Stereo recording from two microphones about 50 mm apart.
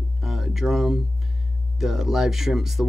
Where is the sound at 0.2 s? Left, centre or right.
Centre.